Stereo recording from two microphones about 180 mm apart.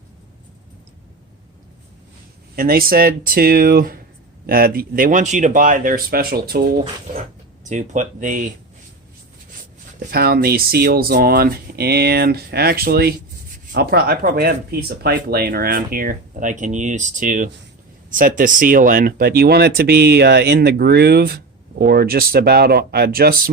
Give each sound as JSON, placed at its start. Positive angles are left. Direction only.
{"t": 2.6, "sound": "speech", "side_deg": -55}
{"t": 7.6, "sound": "speech", "side_deg": -45}
{"t": 10.1, "sound": "speech", "side_deg": -60}